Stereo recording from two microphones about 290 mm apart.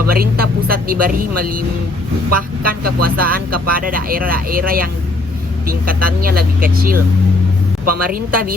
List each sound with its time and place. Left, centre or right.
0.1 s speech: right
2.6 s speech: right
8.1 s speech: right